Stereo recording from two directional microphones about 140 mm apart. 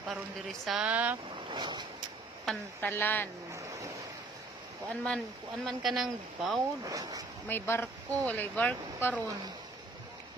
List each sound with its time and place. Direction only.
0.0 s speech: centre (ahead or behind)
1.5 s vehicle: 30° right (ahead or behind)
2.5 s speech: 5° left (ahead or behind)
2.8 s speech: 15° left (ahead or behind)
3.5 s a sound: 25° right (ahead or behind)
4.8 s speech: 5° left (ahead or behind)
6.8 s speech: 25° right (ahead or behind)
7.4 s speech: 15° left (ahead or behind)